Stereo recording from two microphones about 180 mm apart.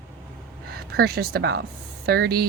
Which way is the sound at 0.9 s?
60° right (ahead or behind).